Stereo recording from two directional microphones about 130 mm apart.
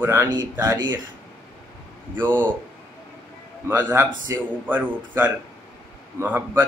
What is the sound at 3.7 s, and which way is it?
Speech, 20° right (ahead or behind).